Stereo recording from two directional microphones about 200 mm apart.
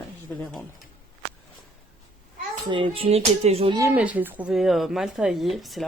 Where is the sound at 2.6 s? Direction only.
25° right (ahead or behind).